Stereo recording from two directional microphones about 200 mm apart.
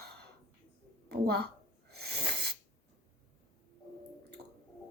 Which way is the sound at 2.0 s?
55° right (ahead or behind).